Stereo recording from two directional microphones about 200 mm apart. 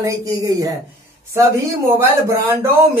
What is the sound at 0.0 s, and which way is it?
Speech, 15° right (ahead or behind).